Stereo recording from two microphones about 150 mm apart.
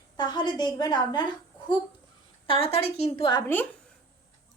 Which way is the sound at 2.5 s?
40° left (ahead or behind).